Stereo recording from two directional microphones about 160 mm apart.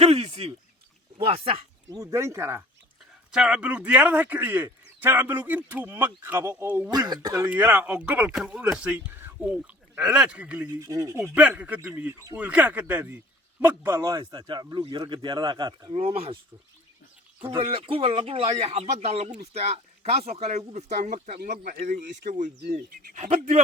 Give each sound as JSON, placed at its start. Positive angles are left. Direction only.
{"t": 0.0, "sound": "a sound", "side_deg": -40}
{"t": 1.2, "sound": "speech", "side_deg": -35}
{"t": 2.0, "sound": "a man's voice", "side_deg": -20}
{"t": 3.3, "sound": "a man's voice", "side_deg": -5}
{"t": 6.9, "sound": "speech", "side_deg": -25}
{"t": 7.4, "sound": "a man's voice", "side_deg": -10}
{"t": 10.8, "sound": "speech", "side_deg": -20}
{"t": 11.2, "sound": "a man's voice", "side_deg": -5}
{"t": 17.6, "sound": "speech", "side_deg": -35}
{"t": 21.3, "sound": "speech", "side_deg": -60}
{"t": 22.3, "sound": "speech", "side_deg": -50}